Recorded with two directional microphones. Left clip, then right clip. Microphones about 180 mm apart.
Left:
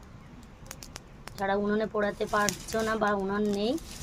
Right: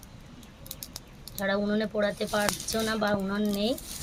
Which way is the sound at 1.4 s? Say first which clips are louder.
Even; 60° left (ahead or behind).